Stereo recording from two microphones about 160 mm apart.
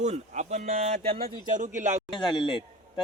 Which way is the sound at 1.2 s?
60° right (ahead or behind).